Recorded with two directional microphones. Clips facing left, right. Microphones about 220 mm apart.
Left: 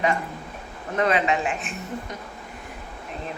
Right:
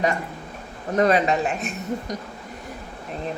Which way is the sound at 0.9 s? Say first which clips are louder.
Right 3 dB; 40° right (ahead or behind).